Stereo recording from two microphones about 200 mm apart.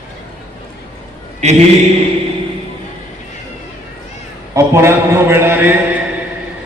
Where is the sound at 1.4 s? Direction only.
35° right (ahead or behind).